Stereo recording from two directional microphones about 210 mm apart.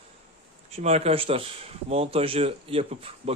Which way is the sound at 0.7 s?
30° right (ahead or behind).